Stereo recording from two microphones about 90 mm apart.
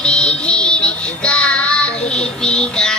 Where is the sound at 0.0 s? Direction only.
10° left (ahead or behind).